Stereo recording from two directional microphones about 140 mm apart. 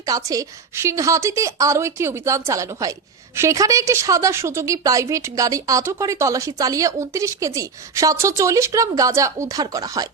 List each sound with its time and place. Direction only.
0.0 s a woman's voice: 25° right (ahead or behind)